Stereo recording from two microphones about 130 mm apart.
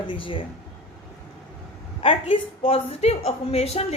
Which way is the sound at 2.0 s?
45° left (ahead or behind).